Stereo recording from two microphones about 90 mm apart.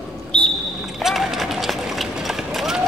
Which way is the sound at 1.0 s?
Centre (ahead or behind).